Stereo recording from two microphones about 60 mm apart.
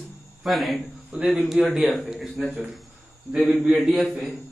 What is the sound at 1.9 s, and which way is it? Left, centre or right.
Speech, centre.